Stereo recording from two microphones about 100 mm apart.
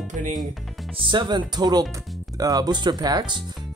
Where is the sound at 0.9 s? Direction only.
55° right (ahead or behind).